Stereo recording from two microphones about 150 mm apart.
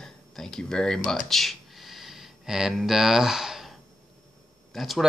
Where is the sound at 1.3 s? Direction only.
Centre (ahead or behind).